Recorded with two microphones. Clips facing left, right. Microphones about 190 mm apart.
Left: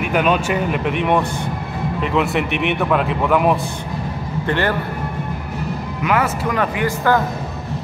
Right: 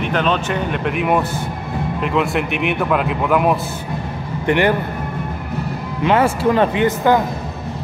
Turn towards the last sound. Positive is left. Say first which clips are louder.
# right 3 dB
turn(degrees=-20)  # may be behind; listen again after turning